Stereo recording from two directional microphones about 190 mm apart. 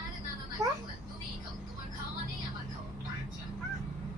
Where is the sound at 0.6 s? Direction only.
20° right (ahead or behind).